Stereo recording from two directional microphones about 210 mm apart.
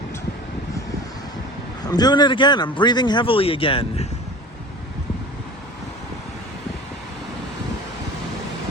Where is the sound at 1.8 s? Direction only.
20° left (ahead or behind).